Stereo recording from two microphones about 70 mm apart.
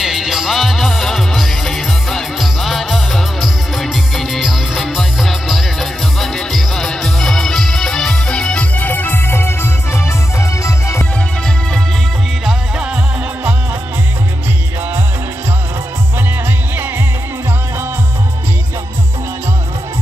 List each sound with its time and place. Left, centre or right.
0.0 s music: centre
8.7 s music: left
12.4 s music: centre